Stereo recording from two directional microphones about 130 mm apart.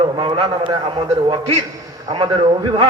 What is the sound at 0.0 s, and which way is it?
A man's voice, 40° right (ahead or behind).